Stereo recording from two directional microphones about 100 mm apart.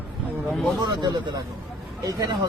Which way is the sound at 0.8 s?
45° right (ahead or behind).